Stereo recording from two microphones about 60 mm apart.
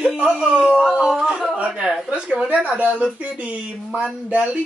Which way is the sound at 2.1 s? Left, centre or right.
Centre.